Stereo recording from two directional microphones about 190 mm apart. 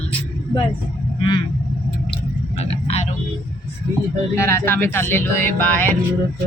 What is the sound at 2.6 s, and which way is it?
Speech, 35° left (ahead or behind).